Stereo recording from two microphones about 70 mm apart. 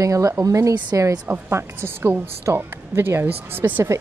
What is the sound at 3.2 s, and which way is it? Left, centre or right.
Speech, right.